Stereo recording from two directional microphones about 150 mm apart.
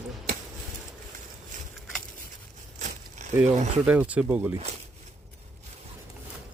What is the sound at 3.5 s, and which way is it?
Speech, 50° right (ahead or behind).